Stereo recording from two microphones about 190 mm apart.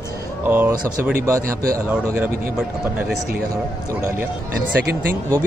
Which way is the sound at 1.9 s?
5° right (ahead or behind).